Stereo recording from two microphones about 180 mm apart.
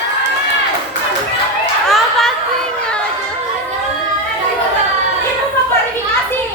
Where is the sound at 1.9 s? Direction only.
Centre (ahead or behind).